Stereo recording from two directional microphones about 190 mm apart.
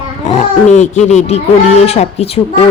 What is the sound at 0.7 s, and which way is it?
Speech, 40° left (ahead or behind).